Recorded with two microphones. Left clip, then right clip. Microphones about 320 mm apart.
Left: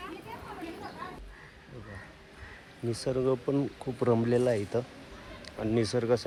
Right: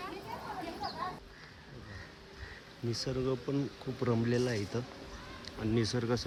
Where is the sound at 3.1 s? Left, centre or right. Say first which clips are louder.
Left 8 dB; left.